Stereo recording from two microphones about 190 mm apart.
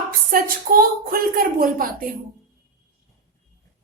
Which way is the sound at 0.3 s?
50° right (ahead or behind).